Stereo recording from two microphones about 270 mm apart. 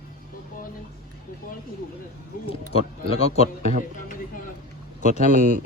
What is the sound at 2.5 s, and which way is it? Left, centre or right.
Speech, left.